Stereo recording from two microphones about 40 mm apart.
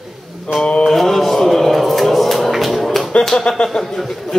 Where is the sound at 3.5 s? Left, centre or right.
Left.